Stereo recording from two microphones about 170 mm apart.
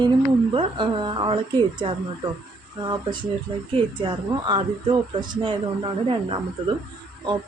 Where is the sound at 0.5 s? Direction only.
30° right (ahead or behind).